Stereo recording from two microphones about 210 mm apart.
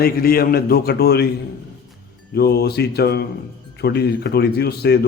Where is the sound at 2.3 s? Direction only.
50° left (ahead or behind).